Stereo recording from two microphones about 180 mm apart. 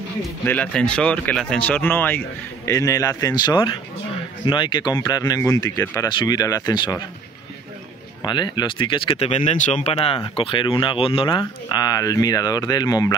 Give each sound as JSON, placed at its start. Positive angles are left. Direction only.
{"t": 0.5, "sound": "speech", "side_deg": 5}
{"t": 8.2, "sound": "speech", "side_deg": 25}
{"t": 9.9, "sound": "speech", "side_deg": 30}